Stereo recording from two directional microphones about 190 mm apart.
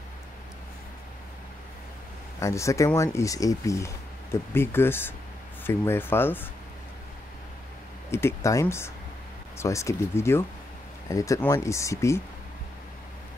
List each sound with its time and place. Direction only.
2.4 s speech: 15° left (ahead or behind)
8.1 s speech: 15° left (ahead or behind)